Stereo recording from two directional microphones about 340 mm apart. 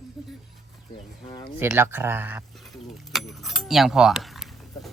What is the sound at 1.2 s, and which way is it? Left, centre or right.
Speech, centre.